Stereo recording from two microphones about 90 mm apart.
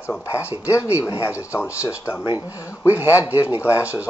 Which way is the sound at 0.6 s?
35° left (ahead or behind).